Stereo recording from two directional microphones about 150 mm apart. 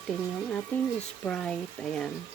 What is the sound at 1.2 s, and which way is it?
Speech, 5° left (ahead or behind).